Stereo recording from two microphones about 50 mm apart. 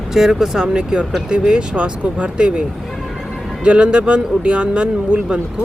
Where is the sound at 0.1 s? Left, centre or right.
Centre.